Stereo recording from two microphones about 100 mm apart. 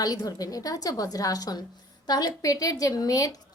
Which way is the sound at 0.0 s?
40° left (ahead or behind).